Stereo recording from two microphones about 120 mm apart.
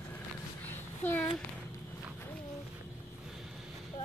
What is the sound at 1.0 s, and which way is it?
Speech, 15° left (ahead or behind).